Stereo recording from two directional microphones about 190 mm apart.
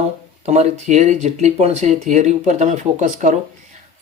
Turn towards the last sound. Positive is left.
turn(degrees=-40)  # may be behind; listen again after turning